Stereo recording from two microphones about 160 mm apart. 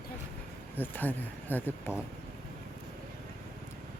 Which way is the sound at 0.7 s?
10° left (ahead or behind).